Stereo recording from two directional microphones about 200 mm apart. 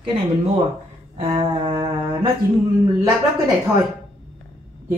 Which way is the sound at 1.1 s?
30° right (ahead or behind).